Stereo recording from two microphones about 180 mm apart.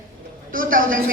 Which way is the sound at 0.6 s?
50° right (ahead or behind).